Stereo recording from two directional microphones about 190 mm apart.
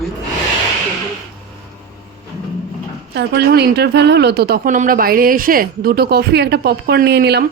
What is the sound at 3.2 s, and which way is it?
A man's voice, 60° right (ahead or behind).